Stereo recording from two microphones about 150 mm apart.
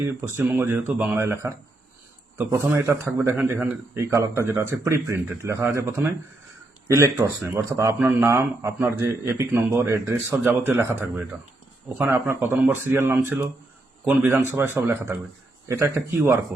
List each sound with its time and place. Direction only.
0.0 s a man's voice: 20° right (ahead or behind)
16.0 s a man's voice: 15° right (ahead or behind)